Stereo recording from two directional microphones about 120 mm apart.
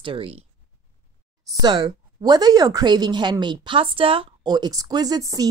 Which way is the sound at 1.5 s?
40° right (ahead or behind).